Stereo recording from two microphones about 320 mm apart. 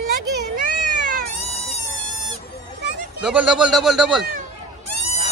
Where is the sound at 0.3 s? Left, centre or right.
Right.